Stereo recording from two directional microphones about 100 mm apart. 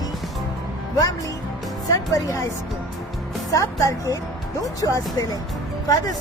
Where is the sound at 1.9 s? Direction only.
35° left (ahead or behind).